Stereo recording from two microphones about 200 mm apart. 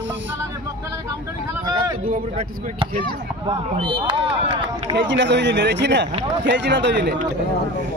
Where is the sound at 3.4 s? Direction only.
25° right (ahead or behind).